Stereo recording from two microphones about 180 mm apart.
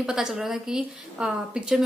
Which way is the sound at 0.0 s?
5° right (ahead or behind).